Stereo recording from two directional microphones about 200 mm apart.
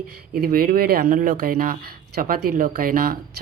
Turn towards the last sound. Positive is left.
turn(degrees=-45)  # may be behind; listen again after turning